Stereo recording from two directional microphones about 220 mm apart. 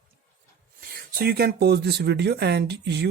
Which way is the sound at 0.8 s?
40° right (ahead or behind).